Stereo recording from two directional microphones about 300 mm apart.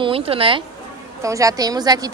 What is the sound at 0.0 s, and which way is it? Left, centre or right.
A woman's voice, centre.